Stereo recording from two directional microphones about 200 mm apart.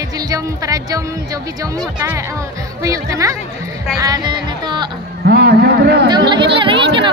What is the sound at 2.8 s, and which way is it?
Speech, 15° right (ahead or behind).